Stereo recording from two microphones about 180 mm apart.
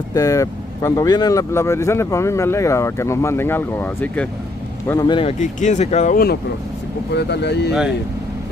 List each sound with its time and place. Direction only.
0.1 s speech: 20° left (ahead or behind)
4.8 s speech: 20° left (ahead or behind)
5.4 s speech: 45° left (ahead or behind)
7.2 s speech: 70° left (ahead or behind)